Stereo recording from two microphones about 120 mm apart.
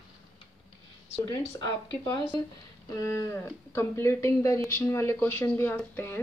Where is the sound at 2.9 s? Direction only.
25° left (ahead or behind).